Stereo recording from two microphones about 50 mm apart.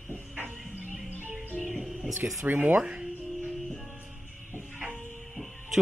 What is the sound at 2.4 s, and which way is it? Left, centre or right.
Speech, right.